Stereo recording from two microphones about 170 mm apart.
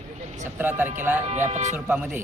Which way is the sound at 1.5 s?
45° right (ahead or behind).